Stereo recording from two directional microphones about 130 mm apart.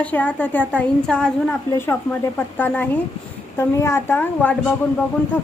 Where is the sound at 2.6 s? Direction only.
15° left (ahead or behind).